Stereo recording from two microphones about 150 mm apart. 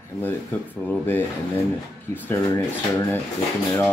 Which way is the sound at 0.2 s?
15° left (ahead or behind).